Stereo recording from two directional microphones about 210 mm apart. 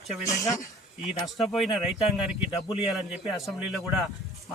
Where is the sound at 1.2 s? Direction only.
Centre (ahead or behind).